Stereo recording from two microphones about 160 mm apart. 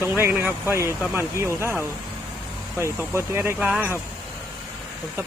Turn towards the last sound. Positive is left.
turn(degrees=-10)  # may be behind; listen again after turning